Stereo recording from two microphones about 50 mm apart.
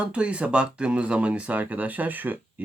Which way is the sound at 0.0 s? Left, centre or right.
Right.